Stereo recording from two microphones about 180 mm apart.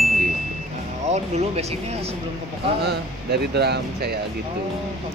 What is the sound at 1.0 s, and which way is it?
Speech, 40° right (ahead or behind).